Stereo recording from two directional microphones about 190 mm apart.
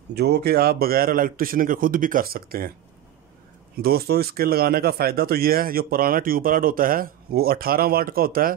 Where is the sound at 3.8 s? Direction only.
55° right (ahead or behind).